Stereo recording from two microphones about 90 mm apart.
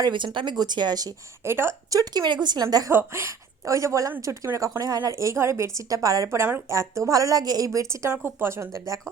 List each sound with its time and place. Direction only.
0.0 s speech: 60° right (ahead or behind)
1.5 s speech: 25° right (ahead or behind)
1.9 s speech: 45° right (ahead or behind)
2.9 s a woman's voice: 30° right (ahead or behind)